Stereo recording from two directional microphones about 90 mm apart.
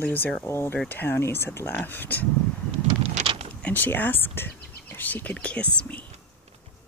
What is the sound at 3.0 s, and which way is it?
Vehicle, 90° right.